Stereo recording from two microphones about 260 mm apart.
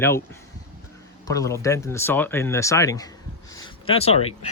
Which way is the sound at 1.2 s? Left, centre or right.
Centre.